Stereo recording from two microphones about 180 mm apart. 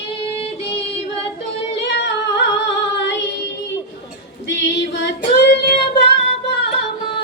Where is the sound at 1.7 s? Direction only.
75° left (ahead or behind).